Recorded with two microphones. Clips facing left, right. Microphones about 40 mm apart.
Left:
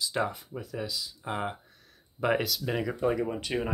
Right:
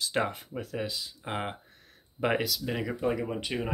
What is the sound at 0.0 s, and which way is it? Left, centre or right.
Speech, right.